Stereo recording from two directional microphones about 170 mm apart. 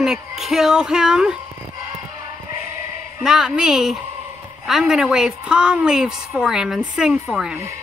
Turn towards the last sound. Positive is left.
turn(degrees=-5)  # may be behind; listen again after turning